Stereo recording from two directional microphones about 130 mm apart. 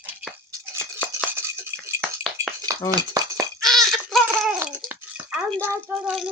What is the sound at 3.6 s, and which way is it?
Laughter, centre (ahead or behind).